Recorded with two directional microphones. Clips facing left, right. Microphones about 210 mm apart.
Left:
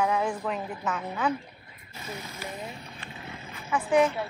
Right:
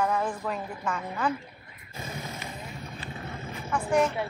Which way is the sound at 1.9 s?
50° right (ahead or behind).